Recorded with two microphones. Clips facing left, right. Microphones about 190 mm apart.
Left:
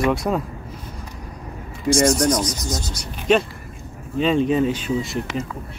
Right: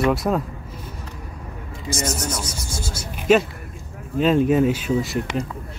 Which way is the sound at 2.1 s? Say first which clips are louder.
Left 9 dB; 5° right (ahead or behind).